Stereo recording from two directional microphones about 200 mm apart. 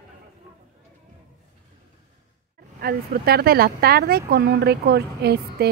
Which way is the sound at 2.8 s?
50° right (ahead or behind).